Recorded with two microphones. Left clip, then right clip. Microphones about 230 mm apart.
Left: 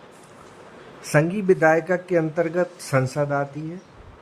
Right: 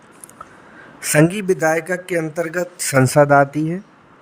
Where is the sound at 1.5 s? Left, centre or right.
Centre.